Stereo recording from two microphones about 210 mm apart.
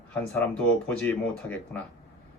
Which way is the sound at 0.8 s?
5° left (ahead or behind).